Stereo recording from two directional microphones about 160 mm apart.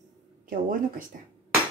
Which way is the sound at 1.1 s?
60° right (ahead or behind).